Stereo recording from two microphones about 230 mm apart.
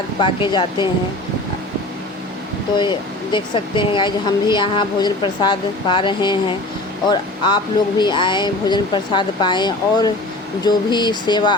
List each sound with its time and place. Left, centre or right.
0.2 s speech: left
3.3 s speech: left